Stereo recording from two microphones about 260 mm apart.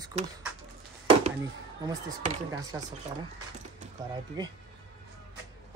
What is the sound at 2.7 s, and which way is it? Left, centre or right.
Speech, centre.